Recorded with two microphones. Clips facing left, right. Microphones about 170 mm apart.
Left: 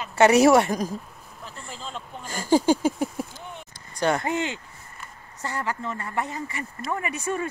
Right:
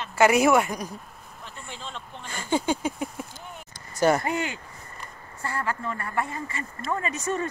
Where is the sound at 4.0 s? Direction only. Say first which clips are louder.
Right 2 dB; 5° right (ahead or behind).